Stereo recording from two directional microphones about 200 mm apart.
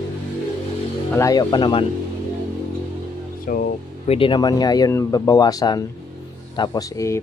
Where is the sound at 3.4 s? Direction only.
45° left (ahead or behind).